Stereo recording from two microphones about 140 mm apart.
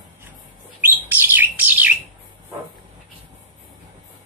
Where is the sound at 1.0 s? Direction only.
15° right (ahead or behind).